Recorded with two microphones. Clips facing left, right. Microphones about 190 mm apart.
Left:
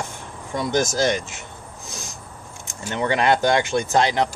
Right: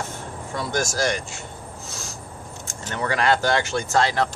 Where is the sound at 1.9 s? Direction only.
15° left (ahead or behind).